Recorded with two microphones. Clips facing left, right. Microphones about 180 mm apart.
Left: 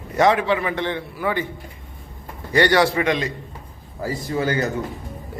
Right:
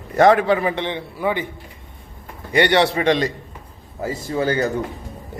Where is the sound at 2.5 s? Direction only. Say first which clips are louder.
Even; 20° right (ahead or behind).